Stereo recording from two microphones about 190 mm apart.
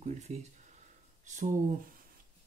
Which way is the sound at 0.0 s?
35° right (ahead or behind).